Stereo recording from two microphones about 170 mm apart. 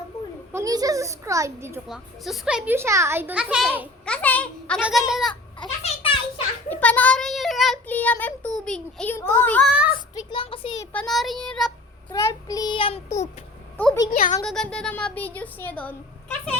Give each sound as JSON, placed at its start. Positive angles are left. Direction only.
{"t": 0.5, "sound": "a woman's voice", "side_deg": -20}
{"t": 1.9, "sound": "a woman's voice", "side_deg": 0}
{"t": 4.0, "sound": "a child's voice", "side_deg": 10}
{"t": 4.8, "sound": "child singing", "side_deg": -5}
{"t": 5.3, "sound": "a sound", "side_deg": 25}
{"t": 6.7, "sound": "a child's voice", "side_deg": 10}
{"t": 9.6, "sound": "a woman's voice", "side_deg": -5}
{"t": 10.2, "sound": "child singing", "side_deg": 30}
{"t": 10.9, "sound": "child singing", "side_deg": 0}
{"t": 12.1, "sound": "child singing", "side_deg": 20}
{"t": 14.1, "sound": "speech", "side_deg": 45}
{"t": 14.4, "sound": "a child's voice", "side_deg": 5}